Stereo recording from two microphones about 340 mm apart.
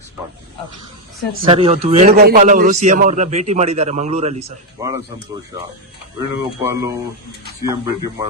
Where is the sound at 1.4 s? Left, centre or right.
Centre.